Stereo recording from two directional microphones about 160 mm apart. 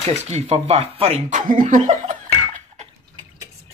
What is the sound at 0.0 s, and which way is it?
Speech, 45° right (ahead or behind).